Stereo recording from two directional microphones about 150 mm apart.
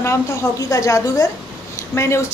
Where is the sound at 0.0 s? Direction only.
20° left (ahead or behind).